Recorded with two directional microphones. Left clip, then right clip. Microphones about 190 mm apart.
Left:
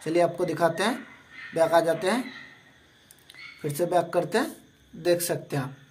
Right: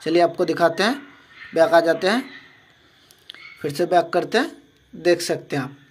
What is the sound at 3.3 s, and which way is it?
A man's voice, 15° right (ahead or behind).